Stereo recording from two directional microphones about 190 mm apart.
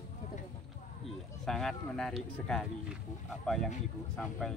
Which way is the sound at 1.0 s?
Centre (ahead or behind).